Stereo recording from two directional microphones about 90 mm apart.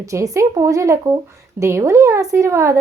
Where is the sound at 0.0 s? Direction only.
35° right (ahead or behind).